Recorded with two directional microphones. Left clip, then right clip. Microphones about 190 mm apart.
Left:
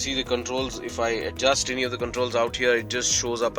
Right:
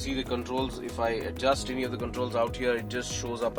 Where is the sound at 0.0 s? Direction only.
10° left (ahead or behind).